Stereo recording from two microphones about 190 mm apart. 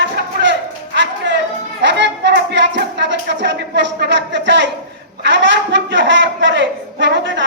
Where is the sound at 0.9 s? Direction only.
70° right (ahead or behind).